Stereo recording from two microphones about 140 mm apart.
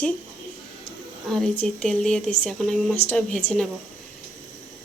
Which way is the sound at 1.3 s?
5° left (ahead or behind).